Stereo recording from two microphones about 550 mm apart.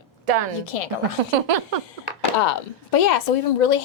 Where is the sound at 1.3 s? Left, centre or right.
Right.